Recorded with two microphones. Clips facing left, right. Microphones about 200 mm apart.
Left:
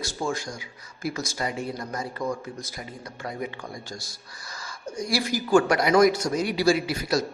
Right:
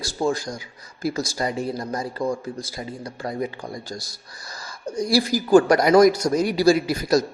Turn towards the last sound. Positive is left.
turn(degrees=-40)  # may be behind; listen again after turning